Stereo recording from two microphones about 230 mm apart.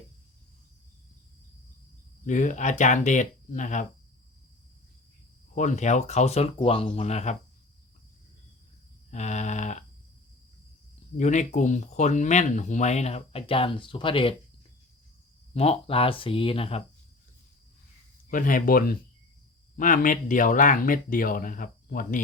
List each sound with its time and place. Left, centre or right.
2.2 s speech: left
5.5 s speech: left
9.0 s speech: left
11.2 s speech: left
15.5 s speech: left
18.3 s speech: left